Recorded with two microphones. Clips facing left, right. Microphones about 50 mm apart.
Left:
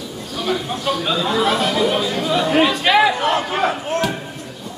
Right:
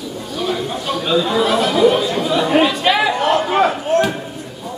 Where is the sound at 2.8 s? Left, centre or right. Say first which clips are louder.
Left 1 dB; centre.